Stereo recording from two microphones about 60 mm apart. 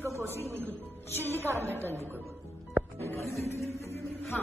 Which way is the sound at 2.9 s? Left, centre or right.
Left.